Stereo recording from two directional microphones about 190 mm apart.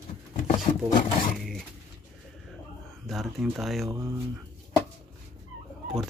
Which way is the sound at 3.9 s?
15° right (ahead or behind).